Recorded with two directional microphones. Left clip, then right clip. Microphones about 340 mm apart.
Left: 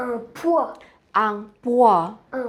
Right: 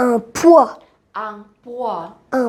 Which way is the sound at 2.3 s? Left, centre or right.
Right.